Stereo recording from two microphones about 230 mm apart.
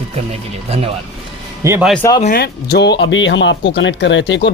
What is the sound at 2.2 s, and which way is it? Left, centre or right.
Speech, left.